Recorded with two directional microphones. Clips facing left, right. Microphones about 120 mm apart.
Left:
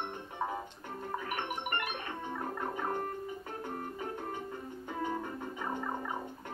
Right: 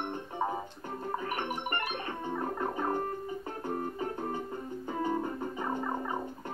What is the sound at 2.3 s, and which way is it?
Fowl, 25° right (ahead or behind).